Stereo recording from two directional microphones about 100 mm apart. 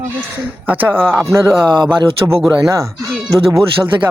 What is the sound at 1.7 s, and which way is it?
Speech, 50° right (ahead or behind).